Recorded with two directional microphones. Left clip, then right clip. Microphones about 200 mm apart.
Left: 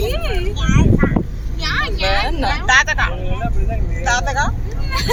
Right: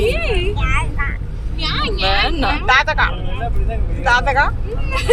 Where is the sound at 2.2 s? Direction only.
15° right (ahead or behind).